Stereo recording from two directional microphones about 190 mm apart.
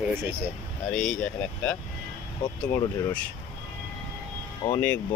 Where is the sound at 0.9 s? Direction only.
5° left (ahead or behind).